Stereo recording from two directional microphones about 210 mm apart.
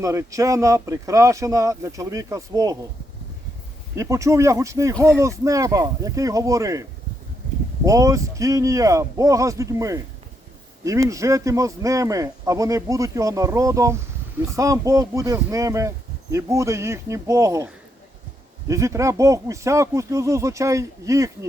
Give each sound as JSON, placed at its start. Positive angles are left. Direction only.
{"t": 0.0, "sound": "speech", "side_deg": -15}
{"t": 3.9, "sound": "speech", "side_deg": -15}
{"t": 7.9, "sound": "speech", "side_deg": -15}
{"t": 18.7, "sound": "speech", "side_deg": -15}